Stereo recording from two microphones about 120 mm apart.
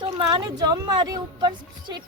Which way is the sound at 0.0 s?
35° right (ahead or behind).